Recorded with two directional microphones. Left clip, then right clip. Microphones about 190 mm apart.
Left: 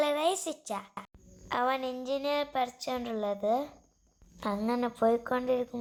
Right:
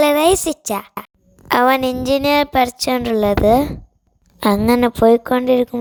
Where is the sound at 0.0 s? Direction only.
60° right (ahead or behind).